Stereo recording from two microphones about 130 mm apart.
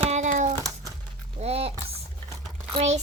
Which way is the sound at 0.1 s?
70° right (ahead or behind).